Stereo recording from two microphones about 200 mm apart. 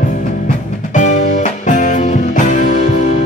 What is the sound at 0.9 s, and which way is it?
Music, 35° left (ahead or behind).